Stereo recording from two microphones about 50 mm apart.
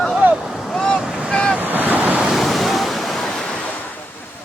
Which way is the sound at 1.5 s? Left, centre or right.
Right.